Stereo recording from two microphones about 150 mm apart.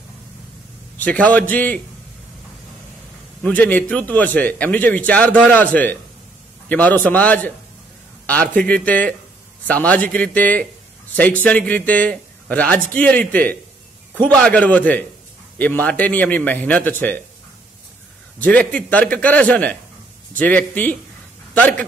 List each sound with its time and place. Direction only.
0.9 s speech: 10° left (ahead or behind)
3.4 s speech: 10° left (ahead or behind)
8.5 s speech: 10° left (ahead or behind)
18.4 s speech: 10° left (ahead or behind)